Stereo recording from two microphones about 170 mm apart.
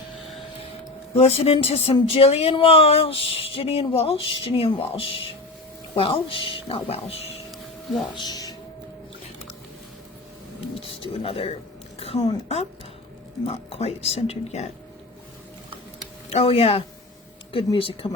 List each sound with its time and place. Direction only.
1.1 s speech: 35° left (ahead or behind)
8.1 s speech: 25° left (ahead or behind)
10.8 s speech: 35° left (ahead or behind)
11.9 s a sound: 35° left (ahead or behind)
13.4 s speech: 35° left (ahead or behind)
16.3 s speech: 35° left (ahead or behind)